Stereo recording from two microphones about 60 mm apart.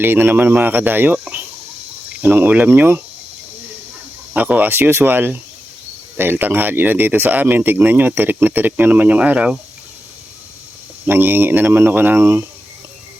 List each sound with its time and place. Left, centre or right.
0.0 s speech: right
2.2 s speech: right
2.6 s speech: right
4.4 s speech: right
4.7 s speech: right
11.0 s speech: right